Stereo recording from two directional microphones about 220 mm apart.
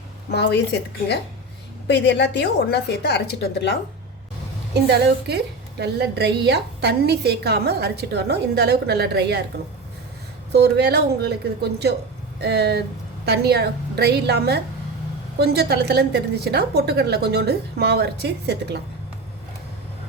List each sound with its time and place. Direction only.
0.3 s a woman's voice: 50° left (ahead or behind)
4.7 s a woman's voice: 50° right (ahead or behind)
10.5 s a woman's voice: 50° right (ahead or behind)